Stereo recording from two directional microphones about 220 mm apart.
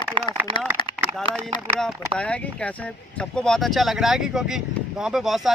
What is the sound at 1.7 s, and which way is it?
Speech, 5° left (ahead or behind).